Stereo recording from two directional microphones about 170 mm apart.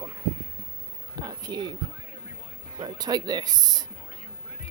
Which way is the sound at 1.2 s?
25° right (ahead or behind).